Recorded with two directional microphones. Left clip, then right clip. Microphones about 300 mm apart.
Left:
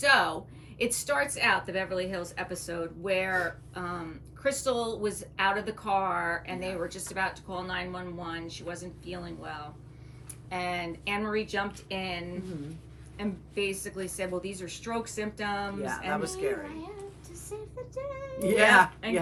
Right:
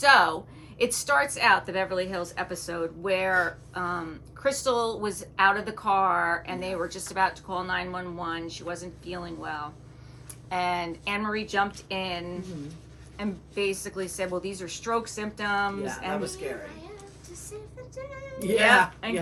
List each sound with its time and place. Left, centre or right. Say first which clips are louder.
0.0 s a woman's voice: right 5 dB; centre
16.2 s a woman's voice: left 2 dB; centre
19.0 s a woman's voice: even; centre